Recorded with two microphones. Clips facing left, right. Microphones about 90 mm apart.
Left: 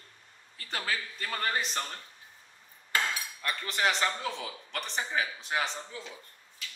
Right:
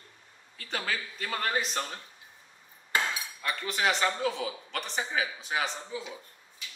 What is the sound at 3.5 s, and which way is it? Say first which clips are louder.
A man's voice: right 1 dB; centre (ahead or behind).